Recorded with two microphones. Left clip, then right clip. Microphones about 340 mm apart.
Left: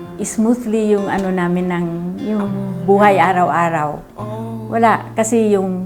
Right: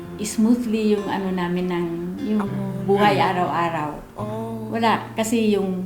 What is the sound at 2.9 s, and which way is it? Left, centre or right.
Speech, left.